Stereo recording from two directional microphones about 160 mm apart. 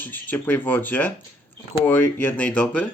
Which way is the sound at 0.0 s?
10° left (ahead or behind).